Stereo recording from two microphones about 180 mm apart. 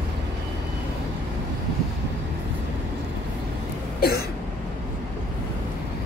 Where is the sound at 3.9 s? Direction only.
60° left (ahead or behind).